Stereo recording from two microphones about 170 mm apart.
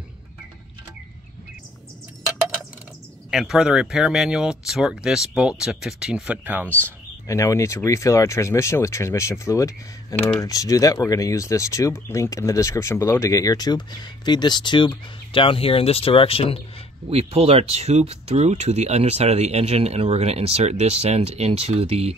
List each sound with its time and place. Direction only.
3.3 s speech: 5° right (ahead or behind)
7.2 s speech: 20° left (ahead or behind); by 16.5 s 35° left (ahead or behind)
17.1 s speech: 35° right (ahead or behind)